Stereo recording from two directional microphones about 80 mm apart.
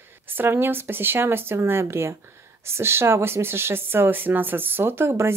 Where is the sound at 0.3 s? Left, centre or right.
Right.